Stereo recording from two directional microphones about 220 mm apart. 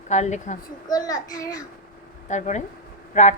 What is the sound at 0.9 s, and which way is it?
Speech, 15° left (ahead or behind).